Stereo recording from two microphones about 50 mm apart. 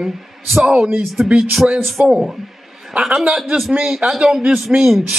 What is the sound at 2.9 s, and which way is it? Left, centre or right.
Speech, right.